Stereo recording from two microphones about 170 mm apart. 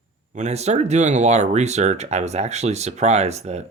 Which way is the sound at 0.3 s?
40° right (ahead or behind).